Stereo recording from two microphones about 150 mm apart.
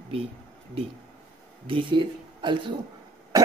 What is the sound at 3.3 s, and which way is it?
Music, 25° right (ahead or behind).